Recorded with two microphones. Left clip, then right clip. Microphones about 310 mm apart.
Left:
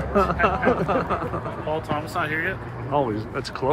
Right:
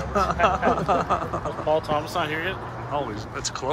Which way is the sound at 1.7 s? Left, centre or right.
Right.